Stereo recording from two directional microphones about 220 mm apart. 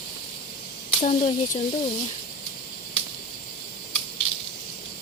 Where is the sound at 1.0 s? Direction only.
35° left (ahead or behind).